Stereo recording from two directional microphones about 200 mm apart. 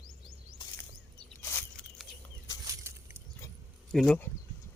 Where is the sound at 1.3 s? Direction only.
5° left (ahead or behind).